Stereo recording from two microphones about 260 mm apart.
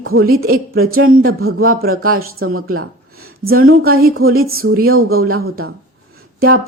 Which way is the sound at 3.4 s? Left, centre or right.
Right.